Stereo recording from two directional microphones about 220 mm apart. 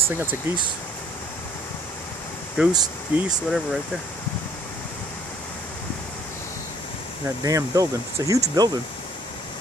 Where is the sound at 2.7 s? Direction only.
20° right (ahead or behind).